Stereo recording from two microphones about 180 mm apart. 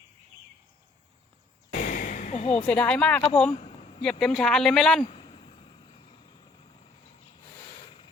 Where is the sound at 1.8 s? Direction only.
45° left (ahead or behind).